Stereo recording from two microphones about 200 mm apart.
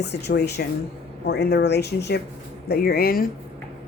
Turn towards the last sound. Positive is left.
turn(degrees=50)  # may be behind; listen again after turning